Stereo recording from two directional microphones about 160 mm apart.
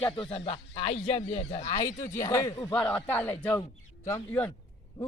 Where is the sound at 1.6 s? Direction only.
20° left (ahead or behind).